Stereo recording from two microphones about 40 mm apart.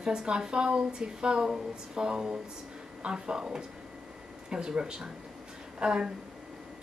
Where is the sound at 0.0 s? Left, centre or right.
Centre.